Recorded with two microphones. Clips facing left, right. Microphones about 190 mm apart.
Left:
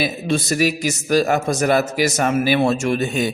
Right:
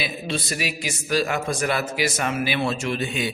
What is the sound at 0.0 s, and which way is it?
A man's voice, 45° left (ahead or behind).